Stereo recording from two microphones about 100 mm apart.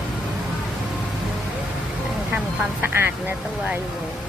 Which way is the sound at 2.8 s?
20° right (ahead or behind).